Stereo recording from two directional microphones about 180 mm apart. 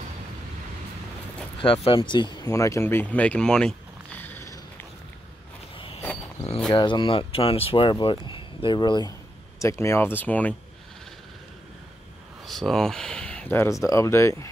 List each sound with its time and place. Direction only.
1.9 s speech: 25° left (ahead or behind)
5.8 s a sound: 30° left (ahead or behind)
6.7 s speech: 25° left (ahead or behind); by 10.5 s 10° left (ahead or behind)
12.4 s speech: centre (ahead or behind)